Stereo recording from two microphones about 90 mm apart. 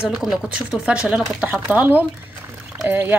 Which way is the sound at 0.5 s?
10° right (ahead or behind).